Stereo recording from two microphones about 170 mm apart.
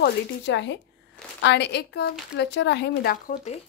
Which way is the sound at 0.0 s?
90° left.